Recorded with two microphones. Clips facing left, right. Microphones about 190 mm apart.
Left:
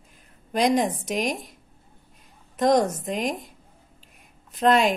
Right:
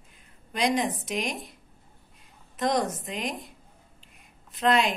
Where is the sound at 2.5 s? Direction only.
40° left (ahead or behind).